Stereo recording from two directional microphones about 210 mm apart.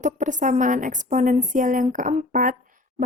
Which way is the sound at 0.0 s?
35° right (ahead or behind).